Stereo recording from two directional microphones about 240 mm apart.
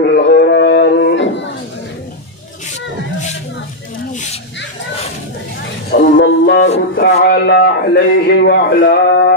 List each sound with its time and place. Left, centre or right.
0.1 s a sound: left
5.9 s music: left
7.0 s a man's voice: left